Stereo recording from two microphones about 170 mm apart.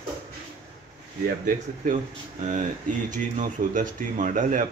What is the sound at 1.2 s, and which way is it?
Speech, 50° right (ahead or behind).